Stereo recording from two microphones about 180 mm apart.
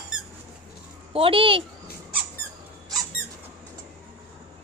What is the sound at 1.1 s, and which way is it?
Speech, 30° right (ahead or behind).